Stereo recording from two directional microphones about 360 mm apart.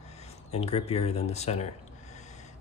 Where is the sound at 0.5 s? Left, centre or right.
Centre.